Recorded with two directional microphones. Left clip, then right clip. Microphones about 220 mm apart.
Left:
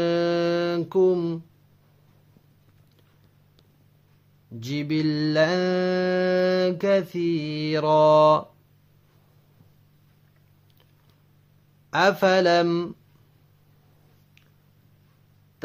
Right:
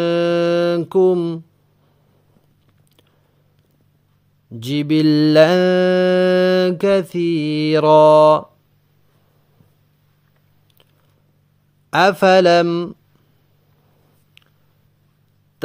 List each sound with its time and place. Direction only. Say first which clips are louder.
0.0 s mantra: right 6 dB; 30° right (ahead or behind)
4.6 s mantra: right 9 dB; 40° right (ahead or behind)
11.9 s mantra: right 7 dB; 30° right (ahead or behind)